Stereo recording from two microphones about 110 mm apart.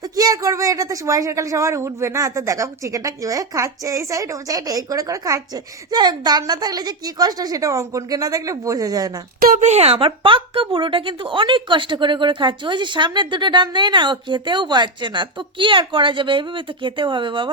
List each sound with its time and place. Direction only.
0.2 s speech: 35° right (ahead or behind)
9.6 s a woman's voice: 85° right; by 17.5 s 50° right (ahead or behind)